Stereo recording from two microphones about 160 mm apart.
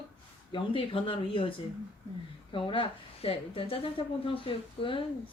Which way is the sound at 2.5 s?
30° left (ahead or behind).